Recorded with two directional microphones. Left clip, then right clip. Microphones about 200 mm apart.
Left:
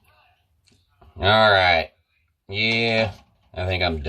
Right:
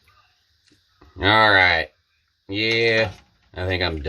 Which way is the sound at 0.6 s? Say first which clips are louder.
Right 2 dB; 50° right (ahead or behind).